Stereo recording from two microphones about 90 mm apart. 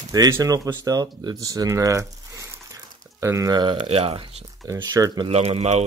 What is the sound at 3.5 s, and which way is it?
Speech, 65° right (ahead or behind).